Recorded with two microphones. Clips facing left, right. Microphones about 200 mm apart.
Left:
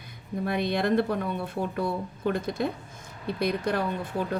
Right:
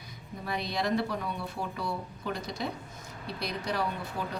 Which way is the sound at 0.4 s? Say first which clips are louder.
Left 6 dB; 55° left (ahead or behind).